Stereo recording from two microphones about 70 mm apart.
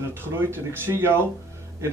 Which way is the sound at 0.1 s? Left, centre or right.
Right.